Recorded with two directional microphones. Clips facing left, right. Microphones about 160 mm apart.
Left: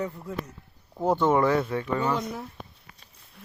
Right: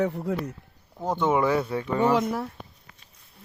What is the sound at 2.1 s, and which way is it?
Speech, 90° right.